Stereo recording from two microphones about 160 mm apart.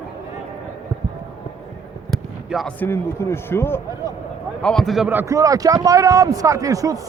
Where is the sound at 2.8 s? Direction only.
15° left (ahead or behind).